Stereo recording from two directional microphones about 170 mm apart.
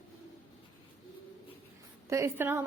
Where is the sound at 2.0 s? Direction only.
15° right (ahead or behind).